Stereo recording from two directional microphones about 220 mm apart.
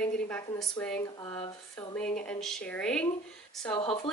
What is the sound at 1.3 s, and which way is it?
Speech, 25° left (ahead or behind).